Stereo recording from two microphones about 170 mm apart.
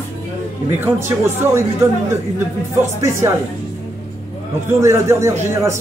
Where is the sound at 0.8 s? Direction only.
15° right (ahead or behind).